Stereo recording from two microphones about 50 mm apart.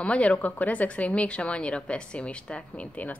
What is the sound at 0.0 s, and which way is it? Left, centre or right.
Speech, left.